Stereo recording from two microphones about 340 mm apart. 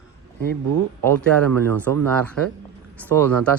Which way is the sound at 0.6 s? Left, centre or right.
Right.